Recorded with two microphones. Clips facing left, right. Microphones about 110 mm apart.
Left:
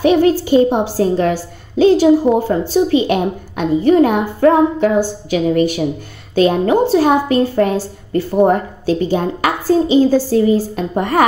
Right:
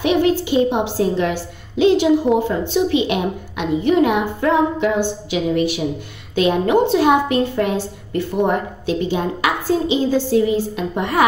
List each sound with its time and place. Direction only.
0.0 s a woman's voice: 40° left (ahead or behind)
2.3 s a woman's voice: 5° left (ahead or behind)
2.7 s a woman's voice: 40° left (ahead or behind)